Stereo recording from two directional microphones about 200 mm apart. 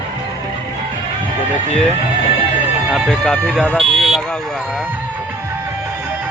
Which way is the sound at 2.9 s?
Centre (ahead or behind).